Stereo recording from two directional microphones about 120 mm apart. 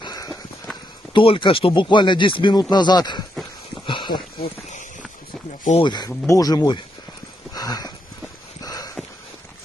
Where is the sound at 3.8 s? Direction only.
40° left (ahead or behind).